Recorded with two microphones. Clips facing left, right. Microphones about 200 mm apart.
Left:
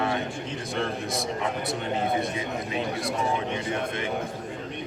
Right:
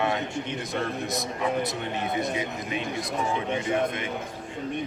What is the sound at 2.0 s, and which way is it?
Speech, 30° left (ahead or behind).